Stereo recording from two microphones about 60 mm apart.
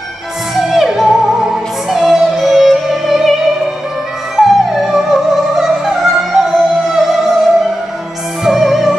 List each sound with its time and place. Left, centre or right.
0.6 s music: centre
4.4 s music: centre
8.5 s music: centre